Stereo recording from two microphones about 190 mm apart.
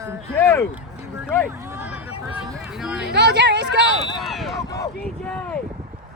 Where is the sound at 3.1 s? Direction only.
65° right (ahead or behind).